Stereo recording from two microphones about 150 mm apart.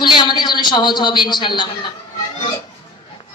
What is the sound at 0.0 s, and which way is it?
A man's voice, 30° left (ahead or behind).